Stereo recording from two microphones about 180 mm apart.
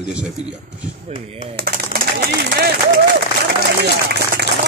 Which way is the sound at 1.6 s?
60° right (ahead or behind).